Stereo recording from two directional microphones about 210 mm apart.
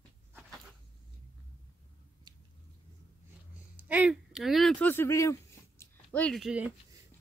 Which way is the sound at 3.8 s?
5° right (ahead or behind).